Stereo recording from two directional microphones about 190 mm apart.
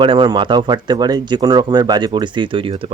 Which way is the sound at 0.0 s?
25° right (ahead or behind).